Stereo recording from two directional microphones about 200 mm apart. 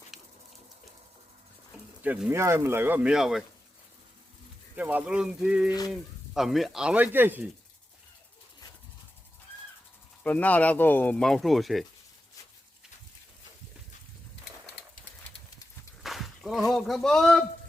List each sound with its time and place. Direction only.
0.1 s a sound: centre (ahead or behind)
1.7 s speech: 5° right (ahead or behind)
4.8 s speech: 10° right (ahead or behind)
10.2 s speech: 10° left (ahead or behind)
16.0 s speech: centre (ahead or behind)